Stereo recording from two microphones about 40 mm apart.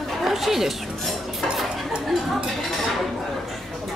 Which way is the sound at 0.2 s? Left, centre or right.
Centre.